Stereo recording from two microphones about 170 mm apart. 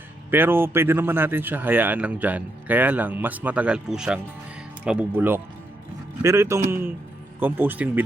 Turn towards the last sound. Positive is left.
turn(degrees=-10)  # may be behind; listen again after turning